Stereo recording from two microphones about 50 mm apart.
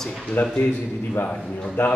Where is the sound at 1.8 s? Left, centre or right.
Left.